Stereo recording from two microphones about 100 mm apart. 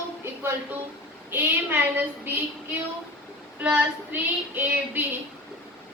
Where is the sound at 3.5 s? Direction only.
15° right (ahead or behind).